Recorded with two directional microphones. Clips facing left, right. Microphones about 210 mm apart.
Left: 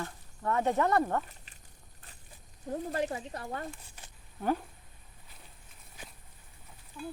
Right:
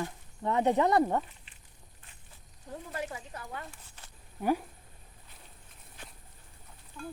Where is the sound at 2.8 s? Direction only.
35° left (ahead or behind).